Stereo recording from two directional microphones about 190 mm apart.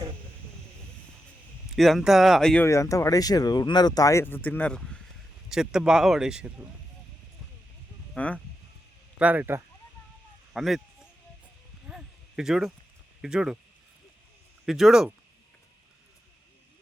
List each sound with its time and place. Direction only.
1.7 s speech: centre (ahead or behind)
2.6 s speech: 15° left (ahead or behind); by 6.7 s 5° right (ahead or behind)
8.1 s speech: 5° left (ahead or behind)
9.1 s speech: 10° right (ahead or behind)
10.5 s a sound: centre (ahead or behind)
13.2 s speech: 5° right (ahead or behind)
14.6 s speech: centre (ahead or behind)